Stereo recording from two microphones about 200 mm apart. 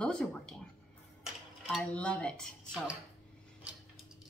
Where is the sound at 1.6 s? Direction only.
5° left (ahead or behind).